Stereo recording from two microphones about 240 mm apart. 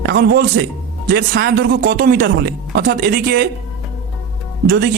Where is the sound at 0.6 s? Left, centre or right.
Right.